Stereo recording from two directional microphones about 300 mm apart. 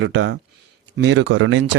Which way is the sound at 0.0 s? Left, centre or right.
Right.